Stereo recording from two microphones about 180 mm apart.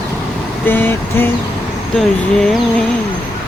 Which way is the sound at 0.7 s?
10° left (ahead or behind).